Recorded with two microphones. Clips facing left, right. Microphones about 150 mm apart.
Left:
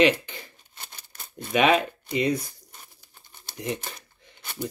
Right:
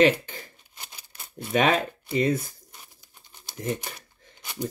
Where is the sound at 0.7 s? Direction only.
10° right (ahead or behind).